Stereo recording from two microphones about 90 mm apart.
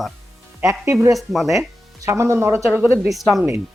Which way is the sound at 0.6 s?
35° right (ahead or behind).